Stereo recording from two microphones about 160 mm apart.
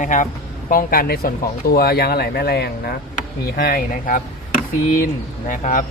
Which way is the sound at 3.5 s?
70° left (ahead or behind).